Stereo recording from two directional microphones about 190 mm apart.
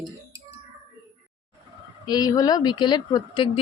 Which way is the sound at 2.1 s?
20° left (ahead or behind).